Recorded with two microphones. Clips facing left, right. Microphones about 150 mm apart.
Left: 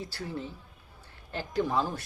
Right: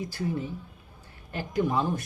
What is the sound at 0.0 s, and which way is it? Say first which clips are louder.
Speech: right 6 dB; 15° right (ahead or behind).